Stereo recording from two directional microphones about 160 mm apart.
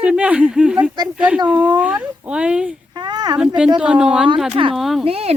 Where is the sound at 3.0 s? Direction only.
25° right (ahead or behind).